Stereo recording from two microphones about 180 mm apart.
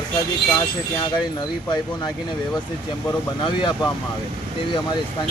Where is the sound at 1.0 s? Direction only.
25° left (ahead or behind).